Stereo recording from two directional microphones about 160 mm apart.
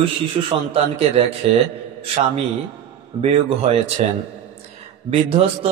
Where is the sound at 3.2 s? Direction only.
40° right (ahead or behind).